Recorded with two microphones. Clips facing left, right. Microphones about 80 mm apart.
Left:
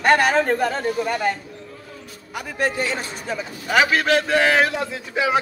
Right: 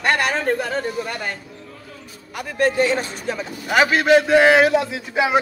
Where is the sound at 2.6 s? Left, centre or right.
Centre.